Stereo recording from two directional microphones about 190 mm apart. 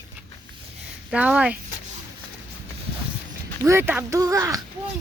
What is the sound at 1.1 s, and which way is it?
Speech, 5° right (ahead or behind).